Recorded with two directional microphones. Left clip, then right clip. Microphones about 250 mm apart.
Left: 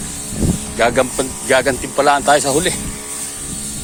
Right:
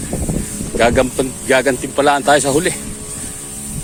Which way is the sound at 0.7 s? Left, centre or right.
Right.